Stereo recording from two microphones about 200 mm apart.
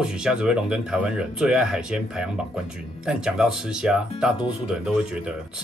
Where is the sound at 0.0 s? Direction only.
5° right (ahead or behind).